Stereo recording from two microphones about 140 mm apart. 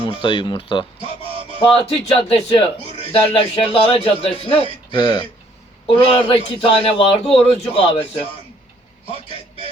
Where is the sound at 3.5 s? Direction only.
45° left (ahead or behind).